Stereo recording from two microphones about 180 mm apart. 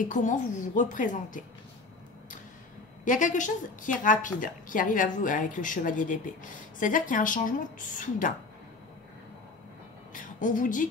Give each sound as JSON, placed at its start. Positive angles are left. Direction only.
{"t": 0.0, "sound": "a woman's voice", "side_deg": 45}
{"t": 3.1, "sound": "a woman's voice", "side_deg": 45}
{"t": 10.1, "sound": "a woman's voice", "side_deg": 45}